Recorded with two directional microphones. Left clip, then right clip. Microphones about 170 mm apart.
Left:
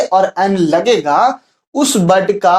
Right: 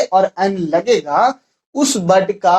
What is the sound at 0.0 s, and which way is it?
Speech, 35° left (ahead or behind).